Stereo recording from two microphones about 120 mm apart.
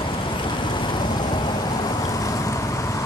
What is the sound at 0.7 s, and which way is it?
Vehicle, 40° left (ahead or behind).